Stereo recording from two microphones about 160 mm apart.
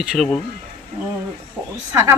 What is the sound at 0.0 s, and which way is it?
Speech, centre (ahead or behind).